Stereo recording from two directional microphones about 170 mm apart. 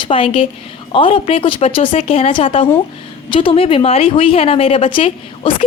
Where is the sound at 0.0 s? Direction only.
30° left (ahead or behind).